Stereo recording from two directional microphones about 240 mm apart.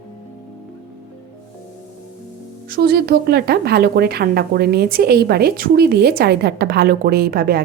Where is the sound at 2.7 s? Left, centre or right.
Right.